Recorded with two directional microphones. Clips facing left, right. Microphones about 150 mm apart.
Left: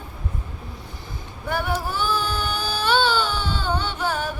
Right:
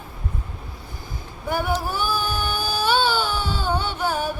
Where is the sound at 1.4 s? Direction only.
10° right (ahead or behind).